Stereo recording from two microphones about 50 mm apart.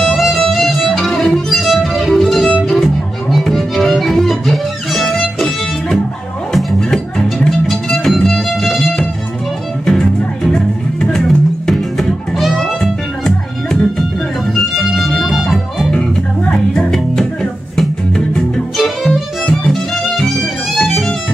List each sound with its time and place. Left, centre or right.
0.0 s music: centre
6.5 s music: centre
13.2 s music: centre
15.9 s music: left
16.7 s music: centre